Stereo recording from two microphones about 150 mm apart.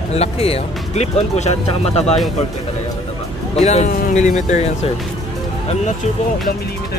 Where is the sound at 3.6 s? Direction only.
50° left (ahead or behind).